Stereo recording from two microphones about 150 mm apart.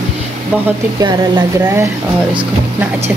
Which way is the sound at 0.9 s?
30° right (ahead or behind).